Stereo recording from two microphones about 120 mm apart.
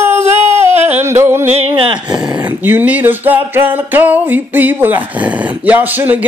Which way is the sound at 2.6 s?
15° right (ahead or behind).